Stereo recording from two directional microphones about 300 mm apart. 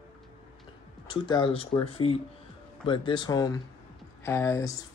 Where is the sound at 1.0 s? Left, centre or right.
Centre.